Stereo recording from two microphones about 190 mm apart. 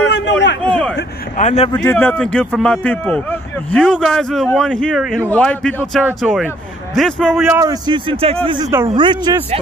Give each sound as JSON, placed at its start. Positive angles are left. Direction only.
{"t": 0.1, "sound": "a sound", "side_deg": 65}
{"t": 0.6, "sound": "a sound", "side_deg": 5}
{"t": 1.3, "sound": "speech", "side_deg": 40}
{"t": 1.7, "sound": "a man's voice", "side_deg": 15}
{"t": 5.8, "sound": "speech", "side_deg": -10}
{"t": 7.0, "sound": "a man's voice", "side_deg": 5}
{"t": 7.6, "sound": "speech", "side_deg": -20}